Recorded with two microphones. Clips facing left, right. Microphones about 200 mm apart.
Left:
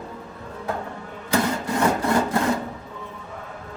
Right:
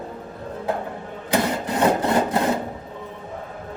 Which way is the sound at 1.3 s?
20° right (ahead or behind).